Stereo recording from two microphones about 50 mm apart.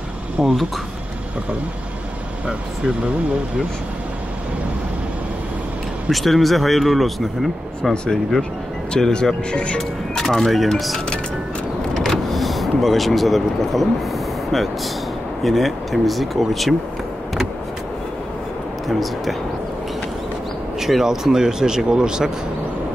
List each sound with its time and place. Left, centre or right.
0.4 s speech: centre
6.0 s speech: centre
9.8 s speech: centre
11.9 s vehicle: centre
15.4 s speech: centre
18.9 s speech: centre
20.8 s speech: centre